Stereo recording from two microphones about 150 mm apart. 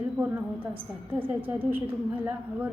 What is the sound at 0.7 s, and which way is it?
Speech, 35° right (ahead or behind).